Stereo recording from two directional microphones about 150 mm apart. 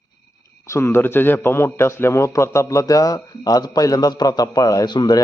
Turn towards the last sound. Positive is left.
turn(degrees=30)  # may be behind; listen again after turning